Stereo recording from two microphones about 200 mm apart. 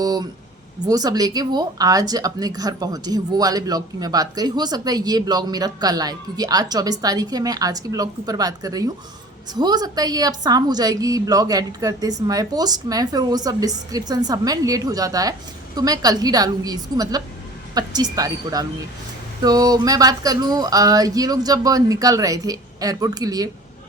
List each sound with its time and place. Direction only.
0.0 s speech: 20° right (ahead or behind)